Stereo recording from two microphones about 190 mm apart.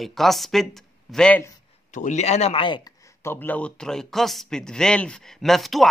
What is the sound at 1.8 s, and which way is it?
Speech, 40° left (ahead or behind).